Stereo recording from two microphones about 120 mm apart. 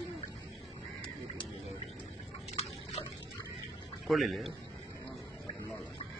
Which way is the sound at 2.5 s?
55° left (ahead or behind).